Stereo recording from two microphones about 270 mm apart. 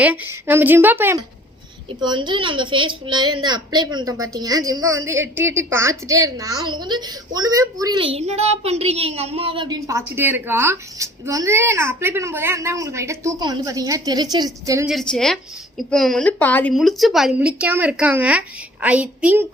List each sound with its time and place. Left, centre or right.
0.0 s a woman's voice: centre
14.8 s a woman's voice: centre